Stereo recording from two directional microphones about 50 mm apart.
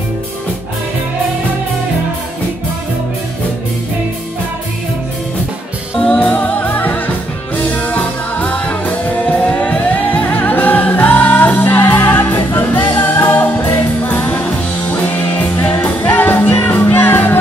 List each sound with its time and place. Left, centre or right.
6.1 s music: left